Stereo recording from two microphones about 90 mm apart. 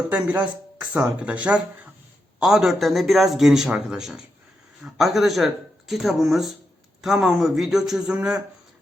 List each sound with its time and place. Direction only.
0.1 s a man's voice: 15° right (ahead or behind)